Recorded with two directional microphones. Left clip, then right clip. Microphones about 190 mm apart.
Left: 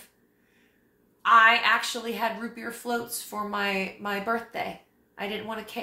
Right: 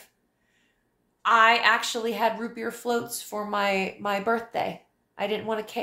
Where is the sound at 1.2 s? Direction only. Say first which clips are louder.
Even; 40° right (ahead or behind).